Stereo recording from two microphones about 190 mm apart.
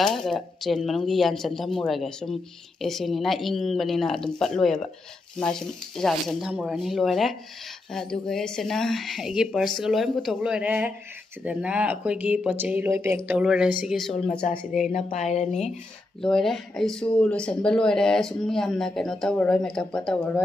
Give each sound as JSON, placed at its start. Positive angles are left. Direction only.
{"t": 0.0, "sound": "speech", "side_deg": 0}
{"t": 14.4, "sound": "speech", "side_deg": 40}
{"t": 16.2, "sound": "speech", "side_deg": 0}